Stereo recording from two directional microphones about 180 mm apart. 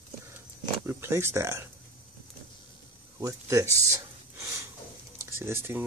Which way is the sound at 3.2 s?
20° right (ahead or behind).